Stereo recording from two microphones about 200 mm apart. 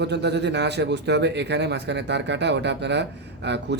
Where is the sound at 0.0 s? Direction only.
60° right (ahead or behind).